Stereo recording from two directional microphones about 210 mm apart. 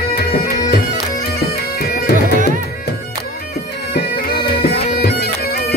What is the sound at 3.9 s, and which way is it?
Bagpipes, 50° left (ahead or behind).